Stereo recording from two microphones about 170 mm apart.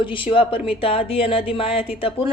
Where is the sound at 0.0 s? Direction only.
30° left (ahead or behind).